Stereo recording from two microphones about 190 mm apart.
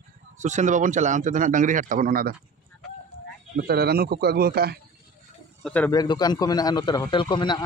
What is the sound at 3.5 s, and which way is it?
A man's voice, 55° right (ahead or behind).